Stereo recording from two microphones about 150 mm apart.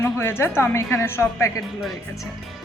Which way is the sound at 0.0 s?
15° left (ahead or behind).